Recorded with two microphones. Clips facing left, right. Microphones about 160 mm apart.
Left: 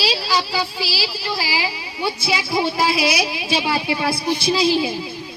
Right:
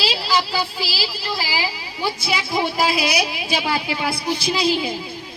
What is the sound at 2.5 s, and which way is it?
Speech, 20° right (ahead or behind).